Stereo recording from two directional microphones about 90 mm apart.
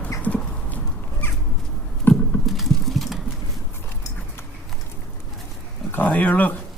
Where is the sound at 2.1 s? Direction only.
15° left (ahead or behind).